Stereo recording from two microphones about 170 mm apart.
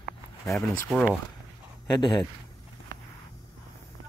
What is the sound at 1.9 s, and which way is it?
Speech, 25° left (ahead or behind).